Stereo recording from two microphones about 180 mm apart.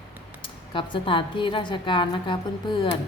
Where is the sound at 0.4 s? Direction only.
30° left (ahead or behind).